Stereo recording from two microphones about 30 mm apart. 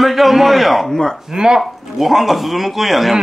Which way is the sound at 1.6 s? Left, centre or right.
Centre.